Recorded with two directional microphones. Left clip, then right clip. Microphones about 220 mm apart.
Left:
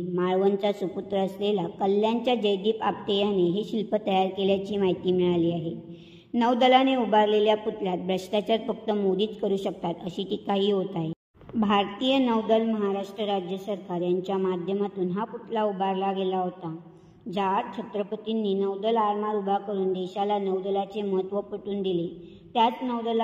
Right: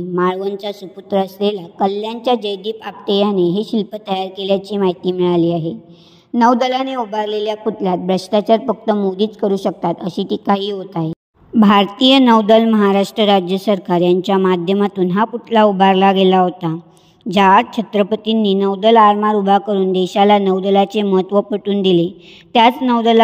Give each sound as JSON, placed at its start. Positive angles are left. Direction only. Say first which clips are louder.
{"t": 0.1, "sound": "a woman's voice", "louder": "right 6 dB", "side_deg": -35}